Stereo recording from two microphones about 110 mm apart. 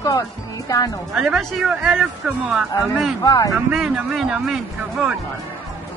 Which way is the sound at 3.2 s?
35° left (ahead or behind).